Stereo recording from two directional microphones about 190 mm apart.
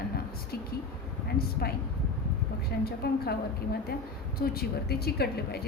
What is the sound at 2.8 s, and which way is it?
Speech, 55° left (ahead or behind).